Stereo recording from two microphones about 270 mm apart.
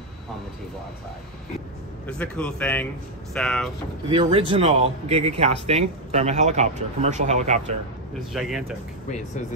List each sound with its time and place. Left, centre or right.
2.0 s speech: centre
4.1 s a man's voice: centre
8.3 s speech: centre